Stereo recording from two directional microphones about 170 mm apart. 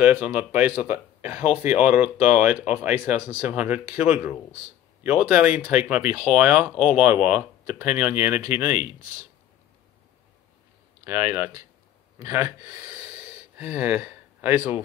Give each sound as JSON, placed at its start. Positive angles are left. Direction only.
{"t": 0.0, "sound": "speech", "side_deg": -10}
{"t": 11.1, "sound": "speech", "side_deg": -15}